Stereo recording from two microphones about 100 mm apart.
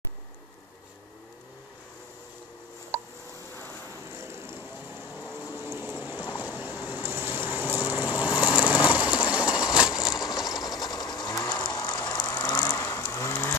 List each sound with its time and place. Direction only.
4.1 s vehicle: 25° right (ahead or behind)
5.6 s train: 20° right (ahead or behind)
6.3 s a sound: 15° right (ahead or behind)
6.8 s vehicle: 20° right (ahead or behind)
10.3 s ratchet: 40° left (ahead or behind)
12.7 s vehicle: 30° left (ahead or behind)